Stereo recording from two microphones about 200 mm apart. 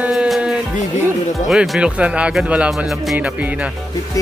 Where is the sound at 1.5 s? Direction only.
5° right (ahead or behind).